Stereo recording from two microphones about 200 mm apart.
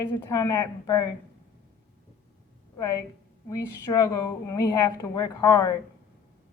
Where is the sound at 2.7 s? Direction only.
15° left (ahead or behind).